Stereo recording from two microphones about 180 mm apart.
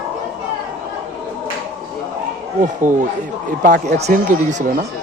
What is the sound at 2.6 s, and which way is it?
Speech, 45° right (ahead or behind).